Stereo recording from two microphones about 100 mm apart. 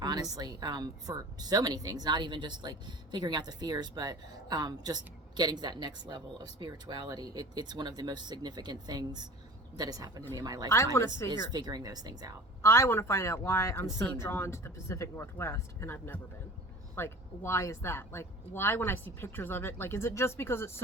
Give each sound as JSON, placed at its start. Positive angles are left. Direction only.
{"t": 0.0, "sound": "speech", "side_deg": -40}
{"t": 12.6, "sound": "speech", "side_deg": 25}